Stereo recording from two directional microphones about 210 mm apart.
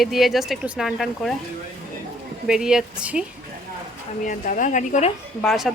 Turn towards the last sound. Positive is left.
turn(degrees=0)  # may be behind; listen again after turning